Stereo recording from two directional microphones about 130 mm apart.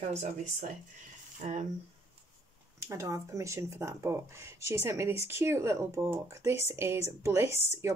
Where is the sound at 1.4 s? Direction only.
65° right (ahead or behind).